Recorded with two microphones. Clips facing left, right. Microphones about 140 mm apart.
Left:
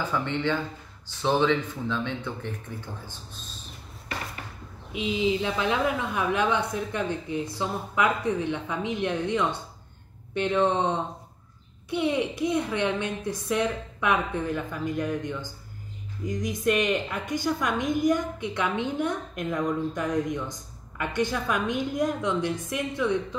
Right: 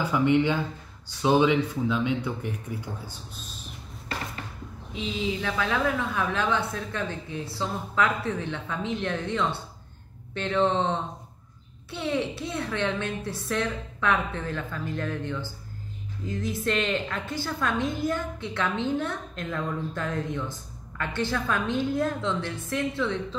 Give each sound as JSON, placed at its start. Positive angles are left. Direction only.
{"t": 0.0, "sound": "speech", "side_deg": -15}
{"t": 4.9, "sound": "a woman's voice", "side_deg": 15}